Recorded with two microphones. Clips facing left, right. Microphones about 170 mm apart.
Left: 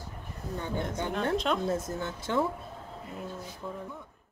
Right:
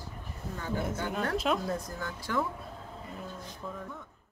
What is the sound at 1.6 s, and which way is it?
Speech, 25° left (ahead or behind).